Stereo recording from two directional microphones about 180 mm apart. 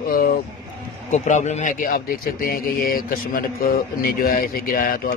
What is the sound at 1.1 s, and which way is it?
A man's voice, 40° left (ahead or behind).